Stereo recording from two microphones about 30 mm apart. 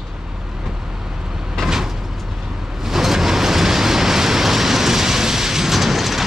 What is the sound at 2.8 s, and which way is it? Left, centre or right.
Vehicle, centre.